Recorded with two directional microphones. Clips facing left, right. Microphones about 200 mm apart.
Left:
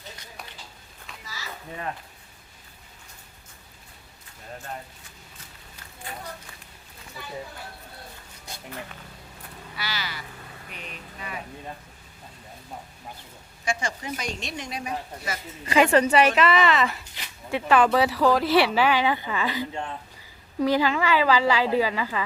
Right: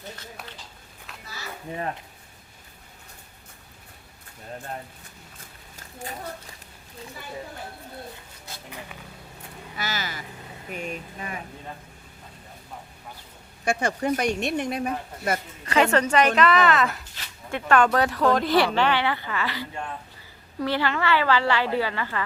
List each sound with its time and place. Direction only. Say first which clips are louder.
5.4 s a sound: right 1 dB; 45° right (ahead or behind)
9.7 s vehicle: right 3 dB; 45° right (ahead or behind)
13.7 s speech: right 6 dB; 60° right (ahead or behind)
15.6 s a woman's voice: left 2 dB; 10° left (ahead or behind)